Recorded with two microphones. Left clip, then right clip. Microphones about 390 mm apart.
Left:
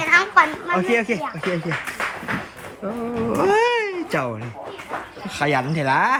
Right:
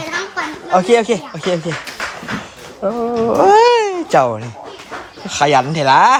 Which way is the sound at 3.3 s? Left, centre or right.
Centre.